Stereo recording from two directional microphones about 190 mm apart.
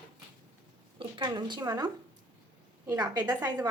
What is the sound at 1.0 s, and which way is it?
A woman's voice, 25° right (ahead or behind).